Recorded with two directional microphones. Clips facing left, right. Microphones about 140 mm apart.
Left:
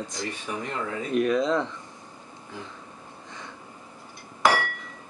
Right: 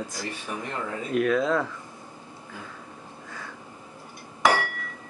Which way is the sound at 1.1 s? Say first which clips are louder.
Even; 15° left (ahead or behind).